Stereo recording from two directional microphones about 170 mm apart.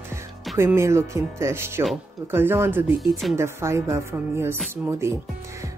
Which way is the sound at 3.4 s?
15° right (ahead or behind).